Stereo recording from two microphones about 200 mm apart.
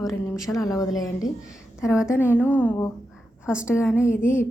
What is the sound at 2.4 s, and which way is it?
Speech, 10° left (ahead or behind).